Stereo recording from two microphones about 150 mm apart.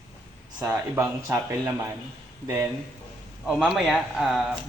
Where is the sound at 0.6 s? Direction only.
15° right (ahead or behind).